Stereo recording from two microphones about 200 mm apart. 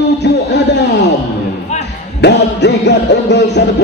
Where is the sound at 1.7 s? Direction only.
35° left (ahead or behind).